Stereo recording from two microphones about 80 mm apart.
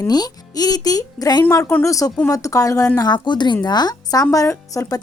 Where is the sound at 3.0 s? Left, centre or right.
Left.